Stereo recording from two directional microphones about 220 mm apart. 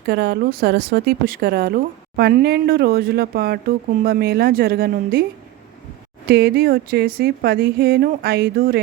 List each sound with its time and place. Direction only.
0.1 s speech: 45° right (ahead or behind)
6.2 s speech: 45° right (ahead or behind)